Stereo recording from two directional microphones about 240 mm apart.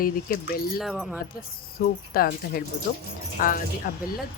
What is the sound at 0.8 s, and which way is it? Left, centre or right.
Speech, centre.